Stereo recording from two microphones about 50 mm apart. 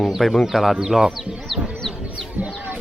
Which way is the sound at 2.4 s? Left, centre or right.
Right.